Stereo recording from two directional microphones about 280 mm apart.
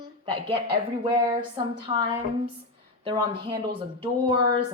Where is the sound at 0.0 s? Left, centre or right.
Centre.